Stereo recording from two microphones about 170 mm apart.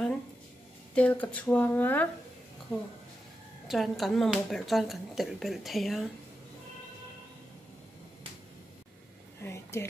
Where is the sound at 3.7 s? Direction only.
Centre (ahead or behind).